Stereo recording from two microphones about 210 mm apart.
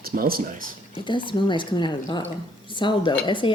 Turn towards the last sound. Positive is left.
turn(degrees=25)  # may be behind; listen again after turning